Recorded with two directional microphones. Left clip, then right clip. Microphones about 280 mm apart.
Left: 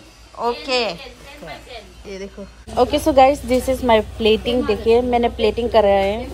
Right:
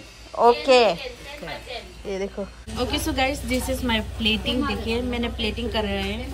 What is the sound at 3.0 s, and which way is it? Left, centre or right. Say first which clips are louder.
Speech: left 14 dB; right.